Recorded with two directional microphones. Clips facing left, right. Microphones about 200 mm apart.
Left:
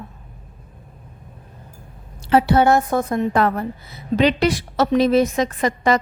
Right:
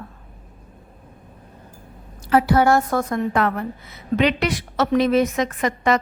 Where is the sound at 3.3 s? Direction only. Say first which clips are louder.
Left 2 dB; 35° left (ahead or behind).